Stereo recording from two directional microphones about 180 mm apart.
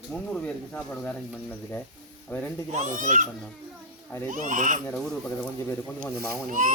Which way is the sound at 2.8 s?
45° right (ahead or behind).